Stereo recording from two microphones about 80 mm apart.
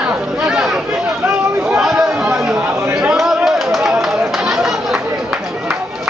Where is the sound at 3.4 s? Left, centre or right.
Centre.